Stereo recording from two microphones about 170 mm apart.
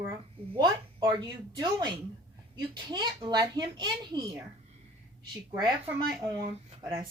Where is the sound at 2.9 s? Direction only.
25° right (ahead or behind).